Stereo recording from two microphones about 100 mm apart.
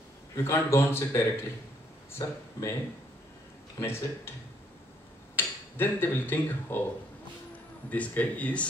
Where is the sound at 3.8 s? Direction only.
25° left (ahead or behind).